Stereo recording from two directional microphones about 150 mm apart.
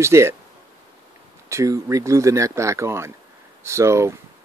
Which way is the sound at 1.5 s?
20° right (ahead or behind).